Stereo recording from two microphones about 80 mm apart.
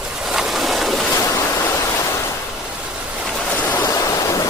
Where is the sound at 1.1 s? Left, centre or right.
Left.